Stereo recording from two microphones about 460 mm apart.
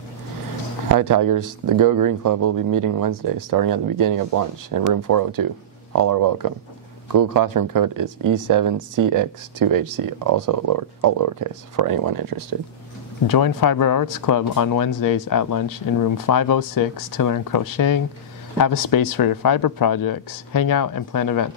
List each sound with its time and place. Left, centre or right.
0.9 s speech: right
13.3 s speech: left